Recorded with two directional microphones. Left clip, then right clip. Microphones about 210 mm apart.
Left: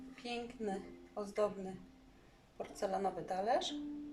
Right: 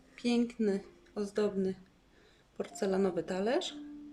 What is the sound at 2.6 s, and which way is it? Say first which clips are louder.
Speech: right 5 dB; 40° right (ahead or behind).